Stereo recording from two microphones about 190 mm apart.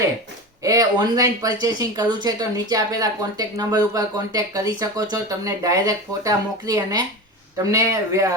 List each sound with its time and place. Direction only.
0.6 s a man's voice: 20° right (ahead or behind)